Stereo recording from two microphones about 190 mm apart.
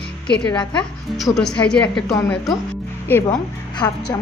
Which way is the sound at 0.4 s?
25° left (ahead or behind).